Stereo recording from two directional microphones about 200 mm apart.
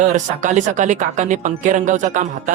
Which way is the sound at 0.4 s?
40° right (ahead or behind).